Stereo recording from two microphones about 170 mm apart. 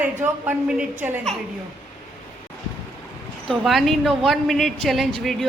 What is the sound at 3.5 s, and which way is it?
Speech, centre (ahead or behind).